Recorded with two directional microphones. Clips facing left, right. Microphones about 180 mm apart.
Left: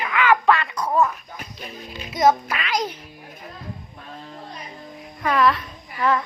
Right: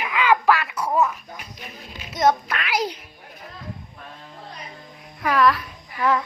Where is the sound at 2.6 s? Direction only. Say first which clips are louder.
Right 1 dB; 10° right (ahead or behind).